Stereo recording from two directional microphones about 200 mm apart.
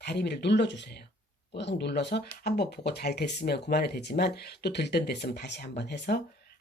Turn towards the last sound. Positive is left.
turn(degrees=55)  # may be behind; listen again after turning